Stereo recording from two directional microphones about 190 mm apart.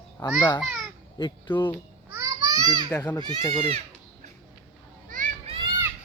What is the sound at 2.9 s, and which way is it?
Speech, 10° left (ahead or behind).